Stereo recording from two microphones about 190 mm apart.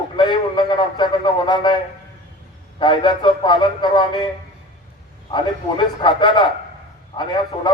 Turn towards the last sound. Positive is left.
turn(degrees=25)  # may be behind; listen again after turning